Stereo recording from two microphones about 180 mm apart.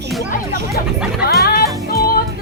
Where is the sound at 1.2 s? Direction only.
55° left (ahead or behind).